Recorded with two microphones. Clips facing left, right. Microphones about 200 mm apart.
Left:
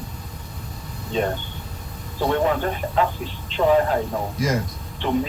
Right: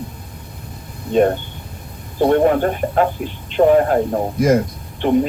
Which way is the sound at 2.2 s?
50° right (ahead or behind).